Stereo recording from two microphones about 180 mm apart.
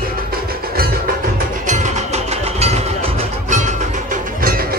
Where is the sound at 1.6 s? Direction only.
40° right (ahead or behind).